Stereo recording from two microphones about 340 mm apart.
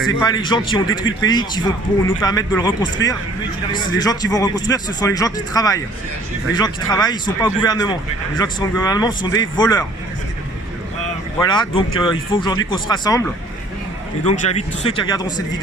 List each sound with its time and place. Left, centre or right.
0.2 s a man's voice: centre
0.9 s speech: left
1.3 s a man's voice: centre
3.0 s speech: left
3.7 s a man's voice: centre
11.3 s a man's voice: centre